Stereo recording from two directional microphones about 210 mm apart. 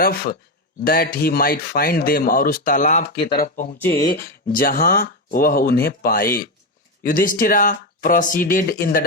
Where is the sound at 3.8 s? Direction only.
10° left (ahead or behind).